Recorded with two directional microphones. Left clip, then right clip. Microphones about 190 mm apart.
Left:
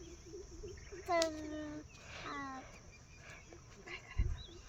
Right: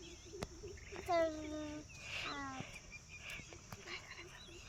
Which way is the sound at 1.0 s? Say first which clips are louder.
Left 1 dB; 5° left (ahead or behind).